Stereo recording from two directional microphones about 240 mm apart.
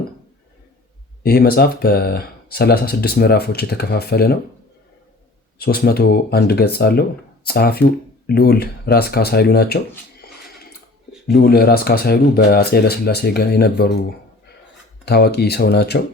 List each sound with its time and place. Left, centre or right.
1.2 s speech: left
5.5 s speech: left
11.3 s speech: left
15.0 s speech: left